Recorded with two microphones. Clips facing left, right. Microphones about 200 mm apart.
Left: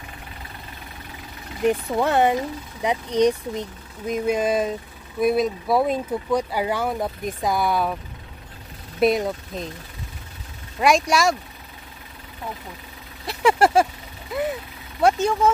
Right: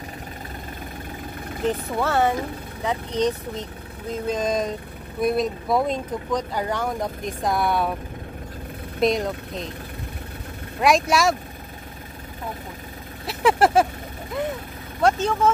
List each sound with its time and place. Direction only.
1.7 s speech: 15° left (ahead or behind); by 7.9 s centre (ahead or behind)
9.0 s speech: centre (ahead or behind)
10.8 s speech: centre (ahead or behind)
13.3 s vehicle: centre (ahead or behind)
15.0 s speech: 10° left (ahead or behind)